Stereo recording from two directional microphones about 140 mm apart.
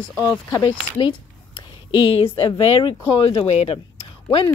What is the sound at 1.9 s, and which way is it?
A woman's voice, 40° left (ahead or behind).